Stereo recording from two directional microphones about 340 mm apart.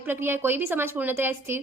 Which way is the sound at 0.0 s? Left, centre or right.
Centre.